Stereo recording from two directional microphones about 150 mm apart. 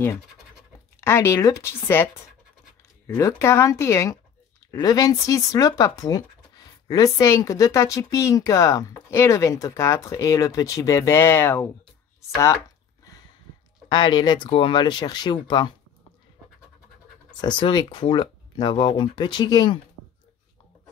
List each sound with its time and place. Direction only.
1.0 s speech: 20° left (ahead or behind)
3.2 s speech: 20° left (ahead or behind)
13.8 s speech: 30° left (ahead or behind)
17.3 s speech: 30° left (ahead or behind)